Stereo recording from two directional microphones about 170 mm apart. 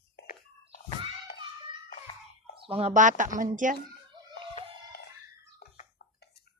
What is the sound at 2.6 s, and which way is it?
Speech, 35° right (ahead or behind).